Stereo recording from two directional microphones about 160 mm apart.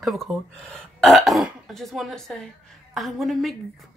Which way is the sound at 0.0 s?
Centre (ahead or behind).